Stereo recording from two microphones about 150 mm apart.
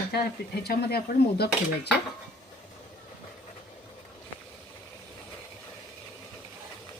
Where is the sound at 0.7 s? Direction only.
90° left.